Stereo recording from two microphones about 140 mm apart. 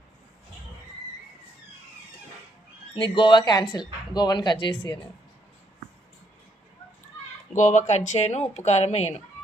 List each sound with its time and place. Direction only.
2.9 s speech: 35° left (ahead or behind)
7.5 s speech: 60° left (ahead or behind)